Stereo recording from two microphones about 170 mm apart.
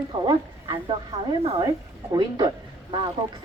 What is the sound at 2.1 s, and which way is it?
Speech, 25° right (ahead or behind).